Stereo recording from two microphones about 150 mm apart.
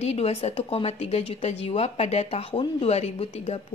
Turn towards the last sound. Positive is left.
turn(degrees=45)  # may be behind; listen again after turning